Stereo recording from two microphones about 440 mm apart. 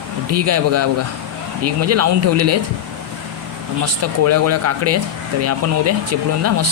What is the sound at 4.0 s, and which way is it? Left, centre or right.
Speech, right.